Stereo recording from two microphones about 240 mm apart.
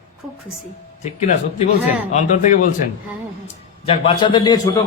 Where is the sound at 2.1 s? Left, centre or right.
Left.